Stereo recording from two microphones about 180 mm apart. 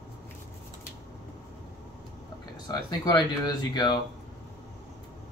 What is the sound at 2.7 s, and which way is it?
Speech, 20° left (ahead or behind).